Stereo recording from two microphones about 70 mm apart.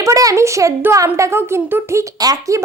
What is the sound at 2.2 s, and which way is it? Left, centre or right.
Speech, right.